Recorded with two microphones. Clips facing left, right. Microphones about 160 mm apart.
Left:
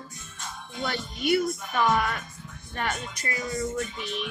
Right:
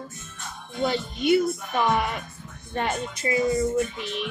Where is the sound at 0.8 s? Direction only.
20° right (ahead or behind).